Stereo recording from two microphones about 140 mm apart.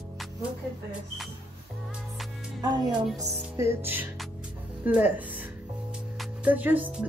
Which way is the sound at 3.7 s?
15° right (ahead or behind).